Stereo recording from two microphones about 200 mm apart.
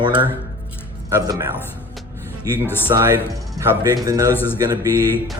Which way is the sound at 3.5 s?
15° right (ahead or behind).